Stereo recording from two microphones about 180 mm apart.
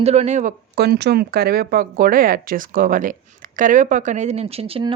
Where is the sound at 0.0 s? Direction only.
35° right (ahead or behind).